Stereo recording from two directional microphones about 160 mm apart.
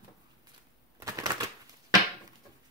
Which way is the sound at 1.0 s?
20° right (ahead or behind).